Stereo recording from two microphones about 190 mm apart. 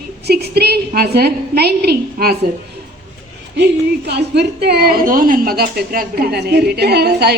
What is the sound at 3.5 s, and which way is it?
A woman's voice, 60° right (ahead or behind).